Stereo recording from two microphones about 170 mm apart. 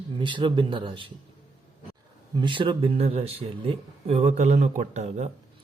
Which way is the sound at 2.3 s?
30° right (ahead or behind).